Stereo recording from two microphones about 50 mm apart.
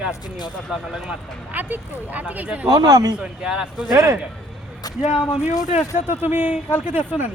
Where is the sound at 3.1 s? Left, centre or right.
Centre.